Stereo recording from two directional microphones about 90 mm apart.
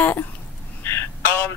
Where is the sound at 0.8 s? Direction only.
25° left (ahead or behind).